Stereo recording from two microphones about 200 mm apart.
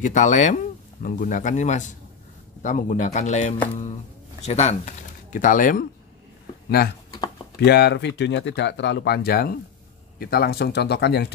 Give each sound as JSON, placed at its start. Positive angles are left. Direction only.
{"t": 0.0, "sound": "speech", "side_deg": 40}
{"t": 7.5, "sound": "speech", "side_deg": 55}